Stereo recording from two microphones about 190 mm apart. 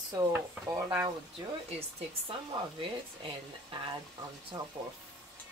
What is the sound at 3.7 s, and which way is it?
Speech, 30° right (ahead or behind).